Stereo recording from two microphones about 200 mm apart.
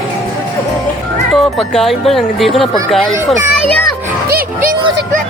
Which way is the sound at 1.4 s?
Centre (ahead or behind).